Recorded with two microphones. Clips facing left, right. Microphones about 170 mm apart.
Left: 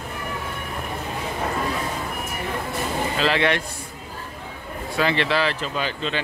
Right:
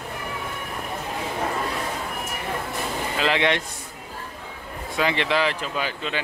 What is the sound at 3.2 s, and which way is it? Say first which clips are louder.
Speech: even; 15° right (ahead or behind).